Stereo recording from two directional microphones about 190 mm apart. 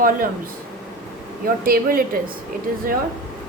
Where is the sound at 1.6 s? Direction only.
50° right (ahead or behind).